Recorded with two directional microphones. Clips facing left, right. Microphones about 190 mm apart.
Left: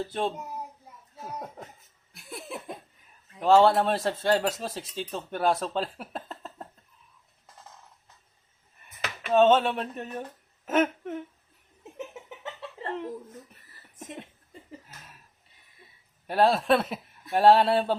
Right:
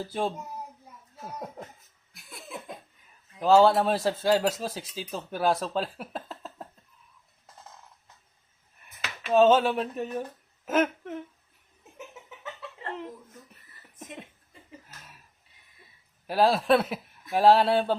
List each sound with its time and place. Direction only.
0.0 s speech: 5° right (ahead or behind)
3.4 s speech: centre (ahead or behind)
9.3 s speech: centre (ahead or behind)
10.7 s a sound: centre (ahead or behind)
11.9 s a sound: 30° left (ahead or behind)
16.2 s speech: centre (ahead or behind)